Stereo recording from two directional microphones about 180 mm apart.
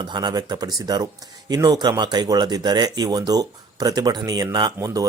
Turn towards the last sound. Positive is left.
turn(degrees=-20)  # may be behind; listen again after turning